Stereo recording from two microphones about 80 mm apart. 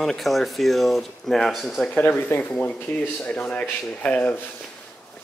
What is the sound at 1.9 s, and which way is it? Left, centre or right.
Speech, left.